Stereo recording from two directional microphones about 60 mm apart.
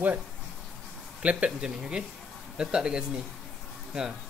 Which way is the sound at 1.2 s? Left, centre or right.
Right.